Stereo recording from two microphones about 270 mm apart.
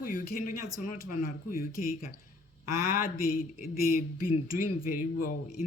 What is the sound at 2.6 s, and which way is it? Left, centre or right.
Speech, centre.